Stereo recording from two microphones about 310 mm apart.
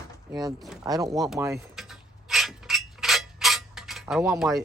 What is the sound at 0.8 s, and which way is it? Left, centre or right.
Speech, centre.